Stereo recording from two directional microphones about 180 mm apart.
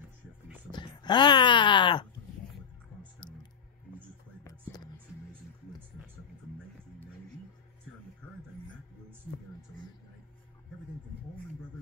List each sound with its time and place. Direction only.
0.7 s speech: 25° left (ahead or behind)